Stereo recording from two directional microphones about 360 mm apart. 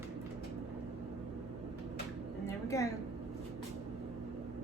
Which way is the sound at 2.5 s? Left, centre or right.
Centre.